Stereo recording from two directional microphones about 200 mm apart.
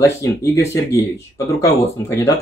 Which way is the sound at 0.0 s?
15° left (ahead or behind).